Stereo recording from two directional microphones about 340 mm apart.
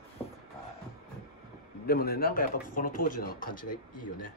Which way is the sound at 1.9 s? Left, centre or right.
Left.